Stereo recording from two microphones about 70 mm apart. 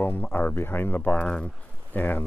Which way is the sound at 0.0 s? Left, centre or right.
Left.